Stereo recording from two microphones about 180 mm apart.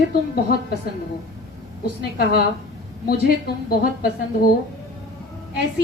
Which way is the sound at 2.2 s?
60° left (ahead or behind).